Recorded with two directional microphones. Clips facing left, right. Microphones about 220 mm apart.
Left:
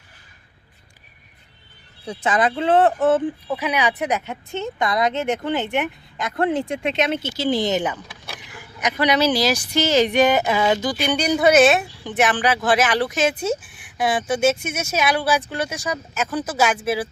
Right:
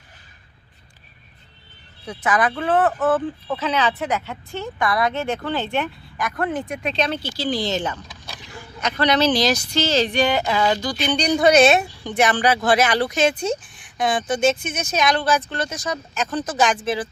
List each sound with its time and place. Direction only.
2.0 s speech: 25° left (ahead or behind)
10.9 s speech: 10° left (ahead or behind)